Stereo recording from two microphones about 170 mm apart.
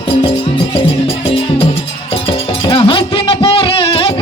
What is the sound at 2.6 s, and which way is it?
Music, 30° left (ahead or behind).